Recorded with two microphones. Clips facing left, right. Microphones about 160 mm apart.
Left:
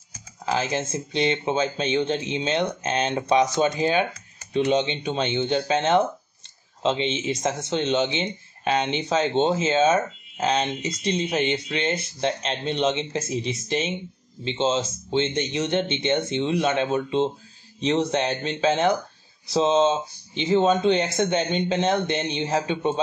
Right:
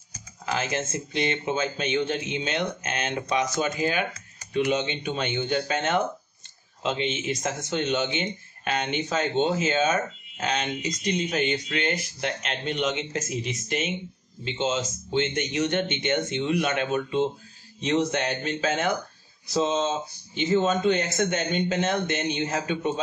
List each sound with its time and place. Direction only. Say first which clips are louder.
0.5 s speech: left 3 dB; 30° left (ahead or behind)